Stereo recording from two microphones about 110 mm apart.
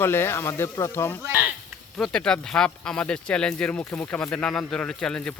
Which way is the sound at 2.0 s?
5° left (ahead or behind).